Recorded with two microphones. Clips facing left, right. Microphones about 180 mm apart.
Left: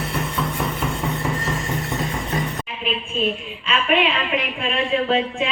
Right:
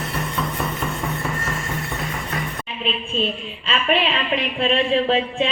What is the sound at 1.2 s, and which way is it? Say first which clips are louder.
Music: left 2 dB; 20° left (ahead or behind).